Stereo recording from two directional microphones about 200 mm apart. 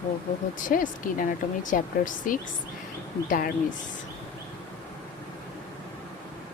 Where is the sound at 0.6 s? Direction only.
40° left (ahead or behind).